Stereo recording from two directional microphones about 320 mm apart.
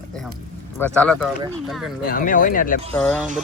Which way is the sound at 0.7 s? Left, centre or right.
Centre.